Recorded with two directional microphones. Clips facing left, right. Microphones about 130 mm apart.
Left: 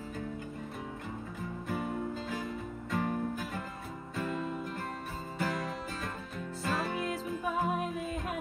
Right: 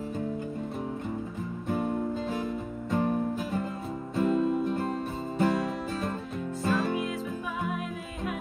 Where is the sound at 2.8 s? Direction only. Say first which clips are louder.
Right 6 dB; 25° right (ahead or behind).